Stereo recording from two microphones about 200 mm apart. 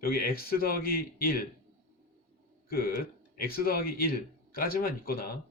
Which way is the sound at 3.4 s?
45° left (ahead or behind).